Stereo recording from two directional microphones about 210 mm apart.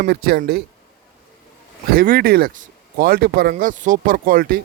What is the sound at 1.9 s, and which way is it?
Speech, 45° right (ahead or behind).